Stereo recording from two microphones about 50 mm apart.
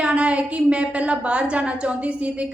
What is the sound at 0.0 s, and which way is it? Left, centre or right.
A woman's voice, right.